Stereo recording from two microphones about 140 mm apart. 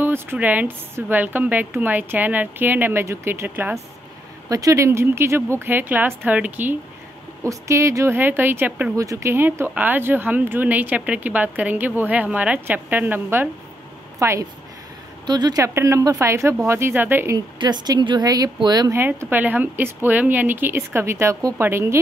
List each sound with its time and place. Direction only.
0.0 s speech: 15° right (ahead or behind)
4.5 s speech: 25° right (ahead or behind)
8.9 s speech: 25° right (ahead or behind)
17.6 s speech: 30° right (ahead or behind)
18.9 s speech: 15° right (ahead or behind)